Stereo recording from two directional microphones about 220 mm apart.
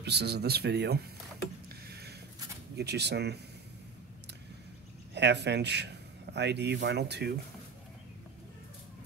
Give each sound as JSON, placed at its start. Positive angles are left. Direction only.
{"t": 0.0, "sound": "speech", "side_deg": -50}
{"t": 1.9, "sound": "a sound", "side_deg": -45}
{"t": 2.7, "sound": "speech", "side_deg": -50}
{"t": 5.1, "sound": "speech", "side_deg": -50}